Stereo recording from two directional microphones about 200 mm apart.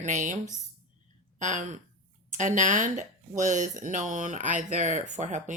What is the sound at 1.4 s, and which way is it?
Speech, 35° right (ahead or behind).